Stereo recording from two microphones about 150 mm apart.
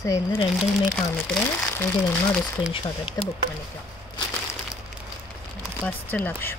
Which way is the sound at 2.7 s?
35° left (ahead or behind).